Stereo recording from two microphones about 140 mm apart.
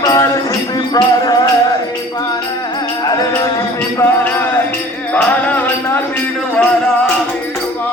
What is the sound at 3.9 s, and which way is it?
Music, 15° left (ahead or behind).